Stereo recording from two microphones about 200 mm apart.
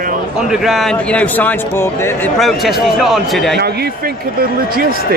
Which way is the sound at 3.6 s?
50° right (ahead or behind).